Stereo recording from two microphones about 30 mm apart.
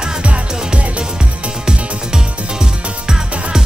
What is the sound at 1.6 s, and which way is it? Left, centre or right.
Music, right.